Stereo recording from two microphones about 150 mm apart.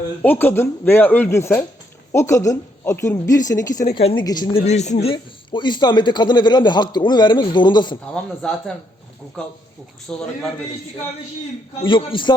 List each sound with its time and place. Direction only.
0.2 s a woman's voice: 15° left (ahead or behind); by 4.6 s 30° left (ahead or behind)
4.6 s speech: 50° left (ahead or behind); by 7.9 s 30° left (ahead or behind)
8.1 s speech: 5° left (ahead or behind)
10.1 s speech: 5° left (ahead or behind)
11.8 s speech: 35° left (ahead or behind)